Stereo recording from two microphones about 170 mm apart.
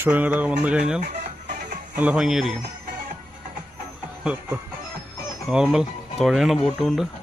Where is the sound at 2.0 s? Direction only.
5° right (ahead or behind).